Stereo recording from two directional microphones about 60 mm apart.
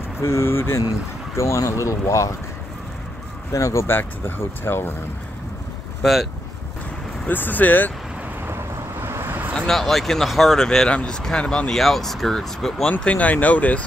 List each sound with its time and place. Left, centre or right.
0.2 s speech: left
1.3 s speech: left
3.5 s speech: left
3.8 s speech: left
6.0 s speech: centre
7.2 s speech: left
9.0 s vehicle: right
9.6 s speech: centre
10.9 s speech: centre
11.8 s speech: centre
13.0 s speech: left